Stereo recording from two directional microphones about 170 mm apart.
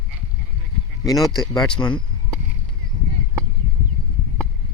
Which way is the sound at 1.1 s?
Centre (ahead or behind).